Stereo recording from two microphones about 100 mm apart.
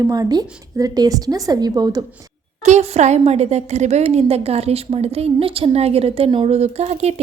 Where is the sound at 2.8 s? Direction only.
90° right.